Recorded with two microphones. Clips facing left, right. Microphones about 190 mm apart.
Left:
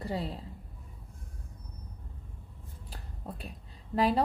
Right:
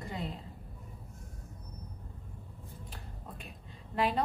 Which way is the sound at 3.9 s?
35° left (ahead or behind).